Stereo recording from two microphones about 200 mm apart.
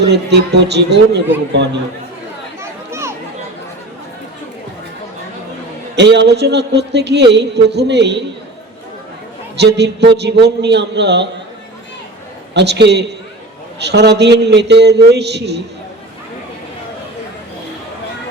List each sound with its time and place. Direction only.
0.1 s speech: 60° right (ahead or behind)
2.6 s a sound: 15° right (ahead or behind)
6.0 s speech: 60° right (ahead or behind)
9.6 s speech: 55° right (ahead or behind)
12.5 s speech: 60° right (ahead or behind)